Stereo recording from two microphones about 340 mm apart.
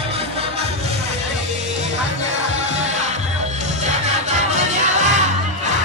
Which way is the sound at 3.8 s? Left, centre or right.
Centre.